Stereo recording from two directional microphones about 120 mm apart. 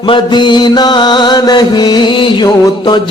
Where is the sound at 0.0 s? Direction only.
40° left (ahead or behind).